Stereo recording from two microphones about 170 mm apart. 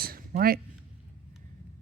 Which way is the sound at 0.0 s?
60° right (ahead or behind).